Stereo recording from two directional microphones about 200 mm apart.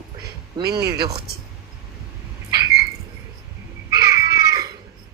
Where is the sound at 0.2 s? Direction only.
55° right (ahead or behind).